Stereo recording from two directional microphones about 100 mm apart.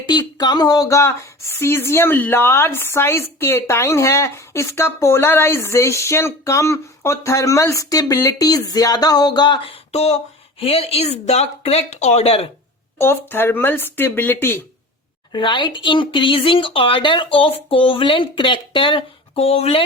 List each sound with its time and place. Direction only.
0.1 s speech: 45° left (ahead or behind)
9.6 s a sound: 90° left
10.6 s speech: 75° left (ahead or behind)
13.0 s speech: 25° left (ahead or behind)
15.3 s speech: 55° left (ahead or behind); by 19.8 s 85° left